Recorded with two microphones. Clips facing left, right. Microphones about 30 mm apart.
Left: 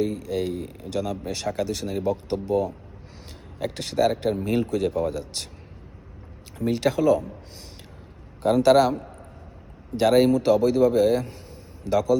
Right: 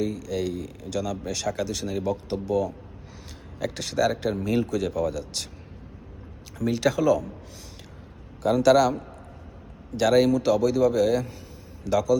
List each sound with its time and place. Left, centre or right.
0.0 s speech: left
3.6 s speech: left
6.6 s speech: left
8.4 s speech: centre